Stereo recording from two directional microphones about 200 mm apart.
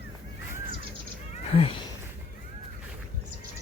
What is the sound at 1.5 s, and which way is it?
Speech, 30° left (ahead or behind).